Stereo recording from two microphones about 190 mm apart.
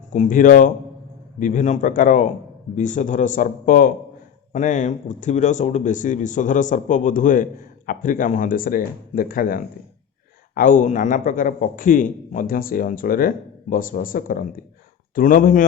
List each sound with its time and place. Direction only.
0.1 s a man's voice: 40° left (ahead or behind)